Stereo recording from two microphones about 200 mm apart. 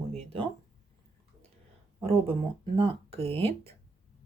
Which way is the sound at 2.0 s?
30° right (ahead or behind).